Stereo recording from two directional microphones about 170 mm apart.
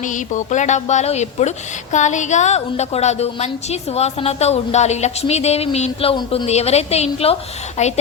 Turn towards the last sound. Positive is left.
turn(degrees=45)  # may be behind; listen again after turning